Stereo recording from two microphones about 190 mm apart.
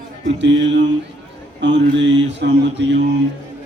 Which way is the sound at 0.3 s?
70° right (ahead or behind).